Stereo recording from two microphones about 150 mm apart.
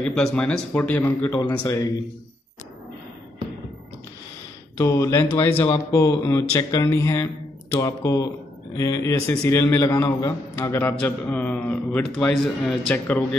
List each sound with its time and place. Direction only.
0.0 s a man's voice: 5° left (ahead or behind)
4.7 s a man's voice: 20° left (ahead or behind)